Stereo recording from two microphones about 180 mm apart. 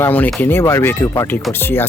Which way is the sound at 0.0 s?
10° left (ahead or behind).